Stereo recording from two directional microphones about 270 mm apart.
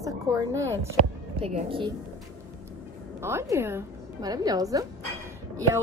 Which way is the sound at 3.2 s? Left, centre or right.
Centre.